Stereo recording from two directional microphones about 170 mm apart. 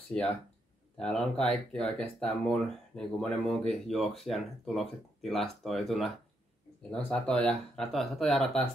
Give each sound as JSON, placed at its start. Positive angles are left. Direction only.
{"t": 0.1, "sound": "speech", "side_deg": 5}